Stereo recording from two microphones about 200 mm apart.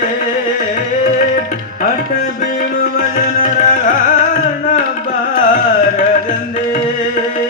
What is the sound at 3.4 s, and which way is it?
Carnatic music, 40° left (ahead or behind).